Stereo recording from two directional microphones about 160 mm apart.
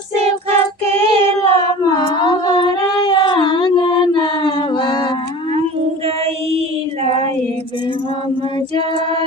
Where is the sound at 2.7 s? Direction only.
25° left (ahead or behind).